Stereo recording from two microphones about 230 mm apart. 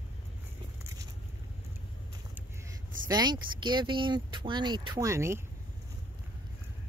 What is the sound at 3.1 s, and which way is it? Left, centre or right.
Speech, centre.